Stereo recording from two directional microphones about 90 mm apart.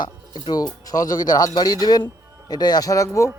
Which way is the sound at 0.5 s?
45° left (ahead or behind).